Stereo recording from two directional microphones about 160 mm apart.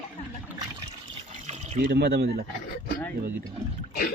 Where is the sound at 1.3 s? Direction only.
50° right (ahead or behind).